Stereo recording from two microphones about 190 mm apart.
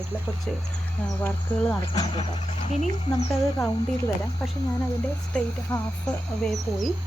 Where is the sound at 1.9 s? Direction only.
30° left (ahead or behind).